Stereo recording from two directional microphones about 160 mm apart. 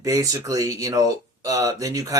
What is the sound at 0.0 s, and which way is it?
Speech, 20° right (ahead or behind).